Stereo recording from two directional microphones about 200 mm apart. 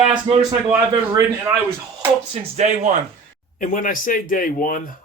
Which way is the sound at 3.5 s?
40° left (ahead or behind).